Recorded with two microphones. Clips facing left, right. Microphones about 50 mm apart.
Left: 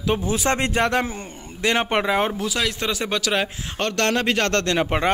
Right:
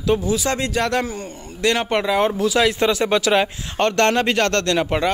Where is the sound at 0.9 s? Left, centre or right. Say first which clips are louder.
Right 1 dB; centre.